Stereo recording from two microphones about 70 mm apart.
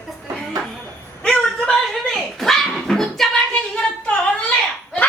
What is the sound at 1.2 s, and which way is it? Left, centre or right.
Speech, centre.